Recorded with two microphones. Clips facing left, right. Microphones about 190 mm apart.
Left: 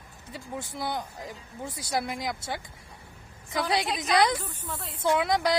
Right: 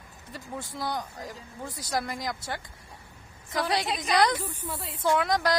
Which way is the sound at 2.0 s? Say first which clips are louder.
Left 1 dB; 15° left (ahead or behind).